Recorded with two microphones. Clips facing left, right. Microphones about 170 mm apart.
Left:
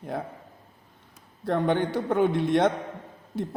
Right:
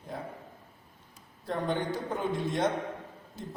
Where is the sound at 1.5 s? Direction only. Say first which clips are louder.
Left 7 dB; 65° left (ahead or behind).